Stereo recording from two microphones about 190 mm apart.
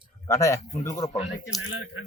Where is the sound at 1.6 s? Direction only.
90° left.